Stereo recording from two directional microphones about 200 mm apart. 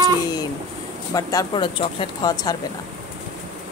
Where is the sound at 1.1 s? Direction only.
20° left (ahead or behind).